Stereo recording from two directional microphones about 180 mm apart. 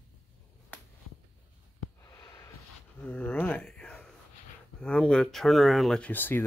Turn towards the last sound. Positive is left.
turn(degrees=10)  # may be behind; listen again after turning